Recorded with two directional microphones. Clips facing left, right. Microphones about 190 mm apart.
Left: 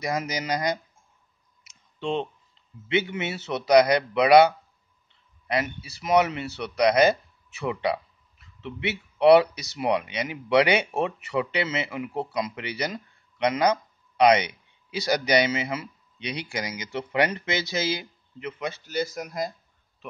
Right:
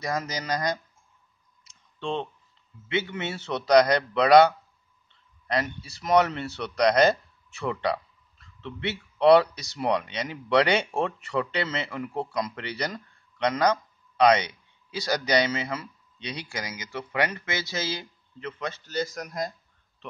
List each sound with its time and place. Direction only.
0.0 s a man's voice: 10° left (ahead or behind)
2.0 s a man's voice: 15° left (ahead or behind)